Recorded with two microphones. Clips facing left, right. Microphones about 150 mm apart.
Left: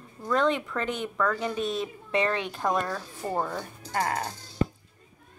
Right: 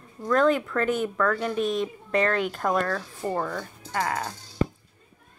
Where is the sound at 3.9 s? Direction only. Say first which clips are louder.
Even; 35° left (ahead or behind).